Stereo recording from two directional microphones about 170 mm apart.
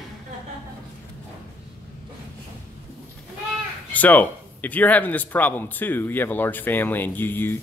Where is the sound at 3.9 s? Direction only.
10° left (ahead or behind).